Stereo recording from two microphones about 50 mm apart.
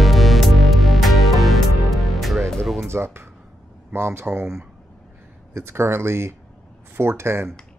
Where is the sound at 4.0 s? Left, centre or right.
Right.